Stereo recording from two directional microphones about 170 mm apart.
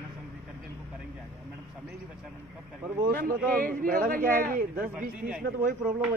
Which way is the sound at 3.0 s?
55° right (ahead or behind).